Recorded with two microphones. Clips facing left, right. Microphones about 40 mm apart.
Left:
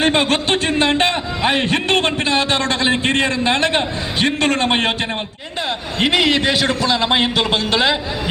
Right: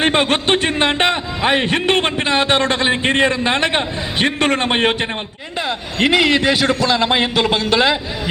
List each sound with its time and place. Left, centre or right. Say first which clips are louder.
0.0 s a sound: even; right
1.5 s a man's voice: right 2 dB; right
6.0 s a man's voice: right 2 dB; centre